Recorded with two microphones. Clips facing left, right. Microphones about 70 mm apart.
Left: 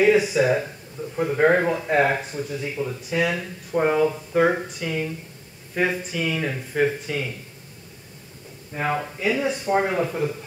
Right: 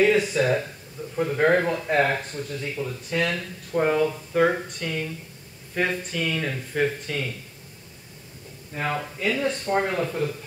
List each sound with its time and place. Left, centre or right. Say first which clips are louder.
0.0 s speech: left 2 dB; centre
8.7 s speech: left 3 dB; centre